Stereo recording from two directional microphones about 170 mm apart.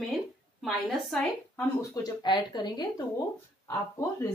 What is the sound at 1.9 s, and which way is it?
Speech, 25° left (ahead or behind).